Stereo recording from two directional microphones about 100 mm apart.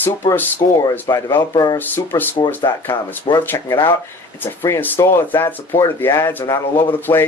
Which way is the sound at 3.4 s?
25° left (ahead or behind).